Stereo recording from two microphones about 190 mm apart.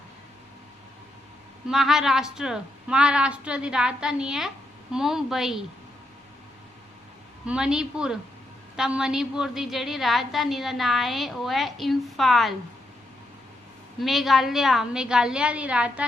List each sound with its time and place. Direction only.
1.6 s speech: centre (ahead or behind)
7.4 s speech: 5° right (ahead or behind)
14.0 s speech: centre (ahead or behind)